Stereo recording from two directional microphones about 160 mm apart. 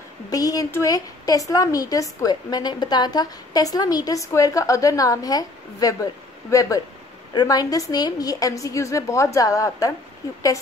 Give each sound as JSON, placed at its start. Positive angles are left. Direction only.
{"t": 0.3, "sound": "a woman's voice", "side_deg": 20}